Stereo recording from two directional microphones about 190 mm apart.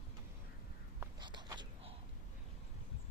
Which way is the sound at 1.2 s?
25° right (ahead or behind).